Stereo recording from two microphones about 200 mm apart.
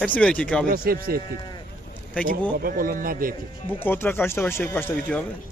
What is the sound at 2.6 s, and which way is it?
Speech, 45° right (ahead or behind).